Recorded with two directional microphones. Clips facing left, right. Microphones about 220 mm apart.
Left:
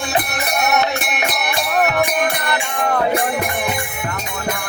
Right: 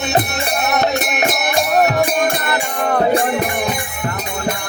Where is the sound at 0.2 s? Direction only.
25° right (ahead or behind).